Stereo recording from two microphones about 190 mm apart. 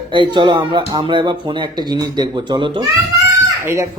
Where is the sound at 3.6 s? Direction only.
15° right (ahead or behind).